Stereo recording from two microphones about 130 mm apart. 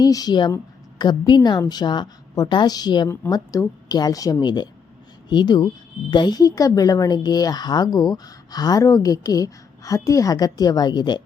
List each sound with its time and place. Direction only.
0.0 s a woman's voice: 30° left (ahead or behind)